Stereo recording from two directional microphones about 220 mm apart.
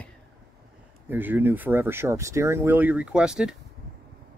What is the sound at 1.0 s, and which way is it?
Speech, 10° right (ahead or behind).